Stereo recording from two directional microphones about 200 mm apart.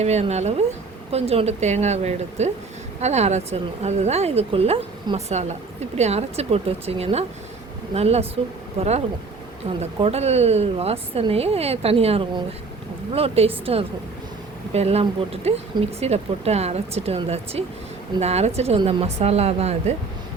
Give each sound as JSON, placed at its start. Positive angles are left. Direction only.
{"t": 0.0, "sound": "speech", "side_deg": -35}
{"t": 14.7, "sound": "speech", "side_deg": -30}